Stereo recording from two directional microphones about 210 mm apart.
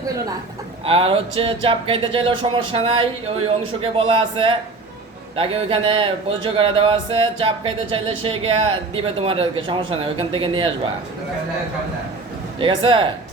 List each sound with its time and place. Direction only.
0.9 s speech: 25° right (ahead or behind)
12.5 s speech: 25° right (ahead or behind)